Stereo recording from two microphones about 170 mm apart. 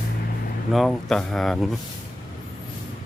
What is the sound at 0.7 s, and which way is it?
Speech, centre (ahead or behind).